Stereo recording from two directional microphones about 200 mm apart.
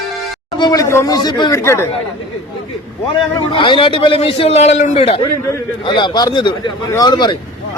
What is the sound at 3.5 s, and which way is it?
A man's voice, 25° left (ahead or behind).